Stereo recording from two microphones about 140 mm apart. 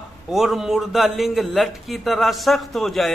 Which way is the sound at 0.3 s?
Centre (ahead or behind).